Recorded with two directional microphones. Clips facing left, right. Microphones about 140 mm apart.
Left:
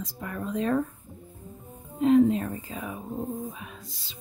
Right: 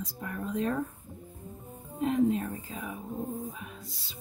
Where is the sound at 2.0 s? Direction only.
90° left.